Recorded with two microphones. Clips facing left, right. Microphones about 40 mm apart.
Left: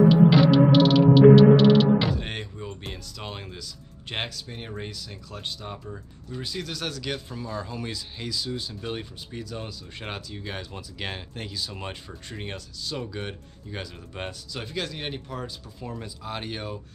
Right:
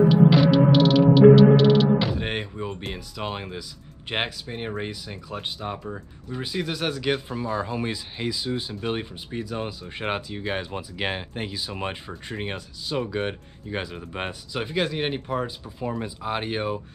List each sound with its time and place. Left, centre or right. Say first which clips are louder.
0.1 s music: even; centre
2.1 s a sound: right 5 dB; centre
2.9 s speech: right 6 dB; centre